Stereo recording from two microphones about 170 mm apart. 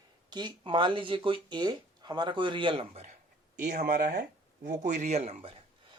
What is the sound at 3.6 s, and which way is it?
Speech, 50° right (ahead or behind).